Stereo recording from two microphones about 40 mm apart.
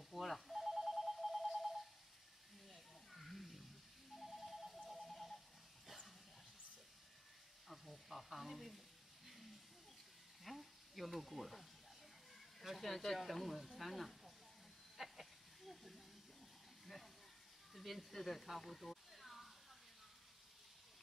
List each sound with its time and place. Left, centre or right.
0.1 s telephone: centre
2.7 s snake: centre
4.1 s music: centre
4.8 s a sound: centre
7.6 s sizzle: centre
10.4 s a sound: centre
12.6 s speech: centre
15.0 s snake: centre
16.8 s a sound: centre
17.7 s speech: centre